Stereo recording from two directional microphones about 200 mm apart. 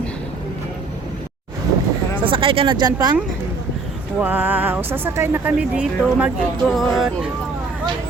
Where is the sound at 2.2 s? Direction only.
25° right (ahead or behind).